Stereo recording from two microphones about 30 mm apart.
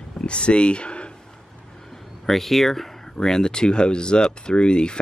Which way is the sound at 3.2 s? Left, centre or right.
Centre.